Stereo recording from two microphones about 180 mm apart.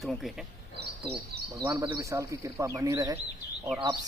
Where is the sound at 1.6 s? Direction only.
15° right (ahead or behind).